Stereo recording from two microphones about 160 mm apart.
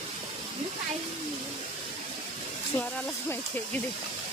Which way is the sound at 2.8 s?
10° left (ahead or behind).